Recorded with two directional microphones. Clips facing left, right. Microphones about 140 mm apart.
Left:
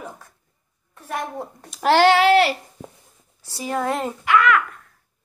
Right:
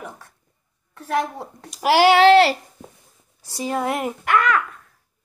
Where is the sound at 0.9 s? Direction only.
85° right.